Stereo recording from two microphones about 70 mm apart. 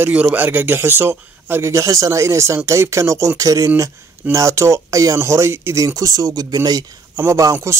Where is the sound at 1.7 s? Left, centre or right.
Right.